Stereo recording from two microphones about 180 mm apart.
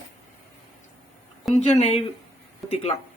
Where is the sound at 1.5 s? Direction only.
40° left (ahead or behind).